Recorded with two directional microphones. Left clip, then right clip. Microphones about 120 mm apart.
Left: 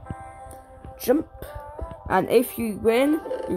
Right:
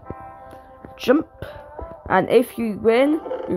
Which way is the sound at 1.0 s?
25° right (ahead or behind).